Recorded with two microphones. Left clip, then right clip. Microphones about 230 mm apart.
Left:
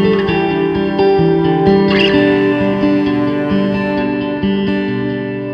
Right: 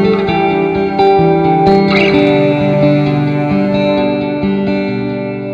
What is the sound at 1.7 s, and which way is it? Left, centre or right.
Music, right.